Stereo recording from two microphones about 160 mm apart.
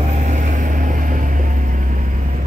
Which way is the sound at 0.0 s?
50° right (ahead or behind).